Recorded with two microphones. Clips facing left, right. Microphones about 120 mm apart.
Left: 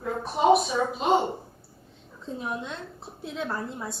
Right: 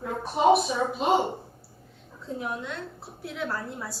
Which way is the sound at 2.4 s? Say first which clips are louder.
Even; 20° left (ahead or behind).